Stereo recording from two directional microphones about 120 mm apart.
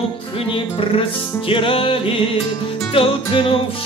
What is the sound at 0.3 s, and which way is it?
Music, 45° left (ahead or behind).